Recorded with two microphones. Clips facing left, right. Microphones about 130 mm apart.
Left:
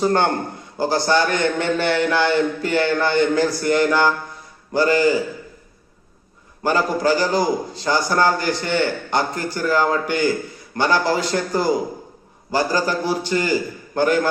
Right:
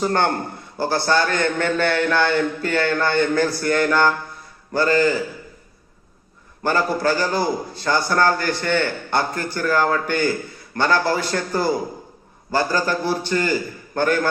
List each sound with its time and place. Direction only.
0.8 s a man's voice: 15° left (ahead or behind)
6.6 s a man's voice: 15° left (ahead or behind)